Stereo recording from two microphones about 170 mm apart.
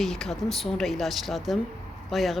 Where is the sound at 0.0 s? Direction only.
Centre (ahead or behind).